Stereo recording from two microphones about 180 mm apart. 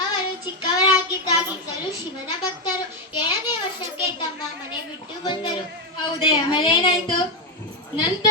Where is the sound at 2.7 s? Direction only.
25° left (ahead or behind).